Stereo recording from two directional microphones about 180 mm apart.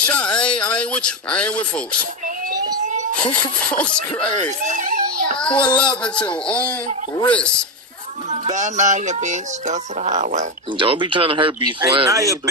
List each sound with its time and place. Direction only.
0.0 s speech: 5° left (ahead or behind)
3.2 s speech: 5° left (ahead or behind)
4.5 s a sound: 40° right (ahead or behind)
5.4 s speech: 5° left (ahead or behind)
8.3 s speech: 40° right (ahead or behind)
10.8 s speech: 30° right (ahead or behind)